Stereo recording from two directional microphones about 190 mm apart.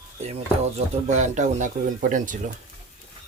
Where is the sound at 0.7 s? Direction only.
40° right (ahead or behind).